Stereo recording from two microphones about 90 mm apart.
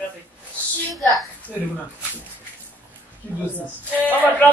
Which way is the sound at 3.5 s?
20° left (ahead or behind).